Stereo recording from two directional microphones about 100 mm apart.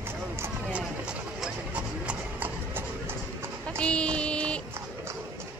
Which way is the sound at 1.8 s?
15° right (ahead or behind).